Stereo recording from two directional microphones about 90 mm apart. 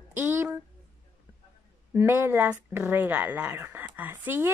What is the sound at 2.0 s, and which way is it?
Speech, 25° right (ahead or behind).